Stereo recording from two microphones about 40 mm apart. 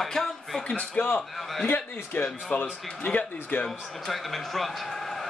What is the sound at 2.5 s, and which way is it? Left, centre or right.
Speech, left.